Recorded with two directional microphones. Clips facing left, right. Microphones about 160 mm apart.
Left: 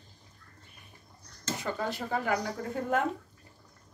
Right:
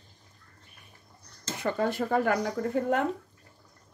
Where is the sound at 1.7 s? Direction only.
55° right (ahead or behind).